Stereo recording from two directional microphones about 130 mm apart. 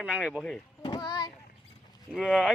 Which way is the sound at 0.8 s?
35° left (ahead or behind).